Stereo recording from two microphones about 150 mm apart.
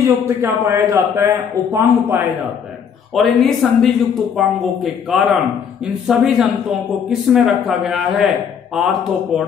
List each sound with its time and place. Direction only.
0.0 s a man's voice: 15° right (ahead or behind)
3.2 s speech: centre (ahead or behind)